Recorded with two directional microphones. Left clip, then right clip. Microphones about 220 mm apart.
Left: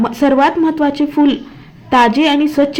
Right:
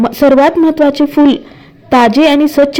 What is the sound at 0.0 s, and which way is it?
A woman's voice, 30° right (ahead or behind).